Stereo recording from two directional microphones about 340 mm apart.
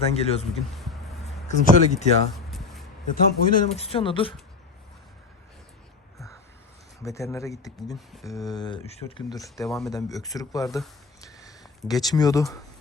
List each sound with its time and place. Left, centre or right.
0.1 s speech: centre
0.8 s a sound: centre
1.5 s speech: left
3.1 s speech: left
7.0 s speech: centre
8.4 s speech: centre